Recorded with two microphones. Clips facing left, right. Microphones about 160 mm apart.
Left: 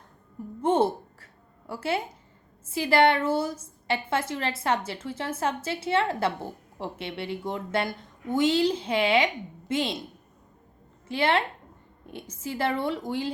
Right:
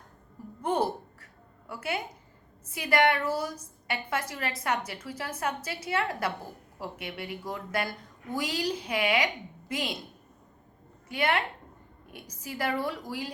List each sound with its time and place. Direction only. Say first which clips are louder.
0.6 s a sound: left 5 dB; 25° left (ahead or behind)
2.6 s a woman's voice: left 4 dB; 30° left (ahead or behind)
11.1 s a woman's voice: left 4 dB; 30° left (ahead or behind)